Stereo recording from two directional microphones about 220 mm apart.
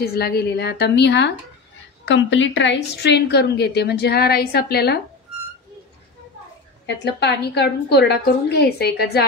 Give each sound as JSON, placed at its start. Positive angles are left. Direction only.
{"t": 0.0, "sound": "a woman's voice", "side_deg": 45}
{"t": 7.2, "sound": "a woman's voice", "side_deg": 50}